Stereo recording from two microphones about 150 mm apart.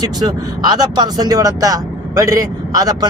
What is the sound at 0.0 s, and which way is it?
Speech, 25° right (ahead or behind).